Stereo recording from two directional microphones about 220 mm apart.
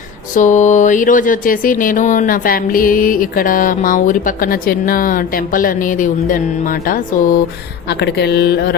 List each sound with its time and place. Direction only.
0.3 s speech: 35° left (ahead or behind)